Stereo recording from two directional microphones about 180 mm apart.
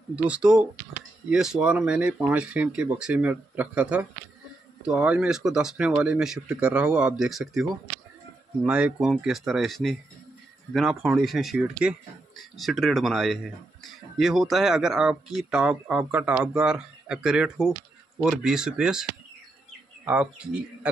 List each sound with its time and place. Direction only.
0.1 s speech: 5° right (ahead or behind)
8.6 s speech: 5° right (ahead or behind)
20.1 s speech: 5° right (ahead or behind)